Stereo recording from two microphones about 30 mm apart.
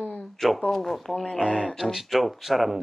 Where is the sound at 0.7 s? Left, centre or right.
Centre.